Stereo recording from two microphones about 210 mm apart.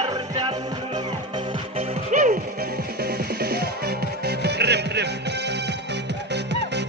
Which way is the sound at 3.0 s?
50° right (ahead or behind).